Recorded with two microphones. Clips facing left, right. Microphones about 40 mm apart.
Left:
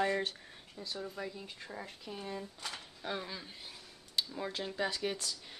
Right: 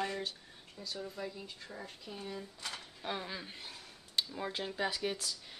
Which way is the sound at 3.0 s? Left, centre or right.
Centre.